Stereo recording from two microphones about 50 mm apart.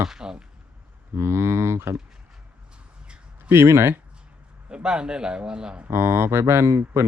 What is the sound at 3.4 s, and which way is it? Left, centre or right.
Speech, right.